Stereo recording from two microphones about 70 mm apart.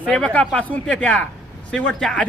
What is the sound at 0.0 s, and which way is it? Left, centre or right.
A man's voice, centre.